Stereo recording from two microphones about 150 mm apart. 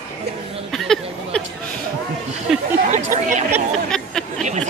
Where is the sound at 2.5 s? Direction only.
Centre (ahead or behind).